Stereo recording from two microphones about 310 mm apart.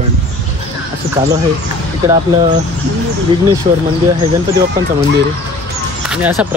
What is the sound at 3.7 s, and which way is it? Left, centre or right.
Speech, centre.